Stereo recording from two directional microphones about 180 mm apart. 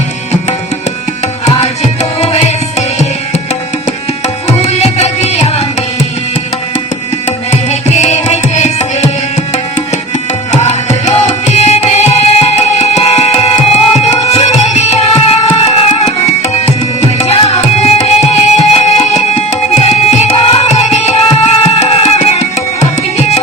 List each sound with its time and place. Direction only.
1.5 s tabla: 35° left (ahead or behind)
4.4 s tabla: 35° left (ahead or behind)
7.3 s tabla: 35° left (ahead or behind)
10.5 s tabla: 40° left (ahead or behind)